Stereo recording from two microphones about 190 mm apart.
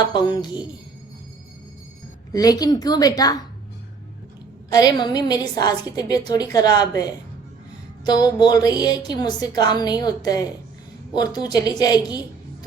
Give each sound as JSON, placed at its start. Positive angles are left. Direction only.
{"t": 0.1, "sound": "a woman's voice", "side_deg": 20}
{"t": 2.3, "sound": "a woman's voice", "side_deg": 20}
{"t": 4.7, "sound": "a woman's voice", "side_deg": 20}